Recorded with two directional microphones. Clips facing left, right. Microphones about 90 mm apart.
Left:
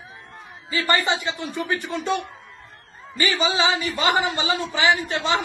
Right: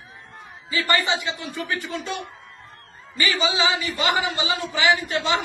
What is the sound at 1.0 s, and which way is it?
Speech, 35° left (ahead or behind).